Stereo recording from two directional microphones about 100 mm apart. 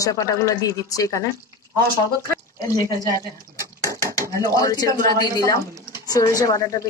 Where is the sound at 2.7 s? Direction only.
35° left (ahead or behind).